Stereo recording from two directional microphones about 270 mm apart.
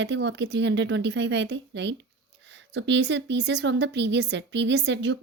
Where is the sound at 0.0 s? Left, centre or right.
Right.